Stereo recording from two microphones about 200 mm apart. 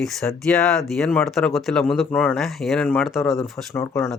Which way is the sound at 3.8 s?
15° left (ahead or behind).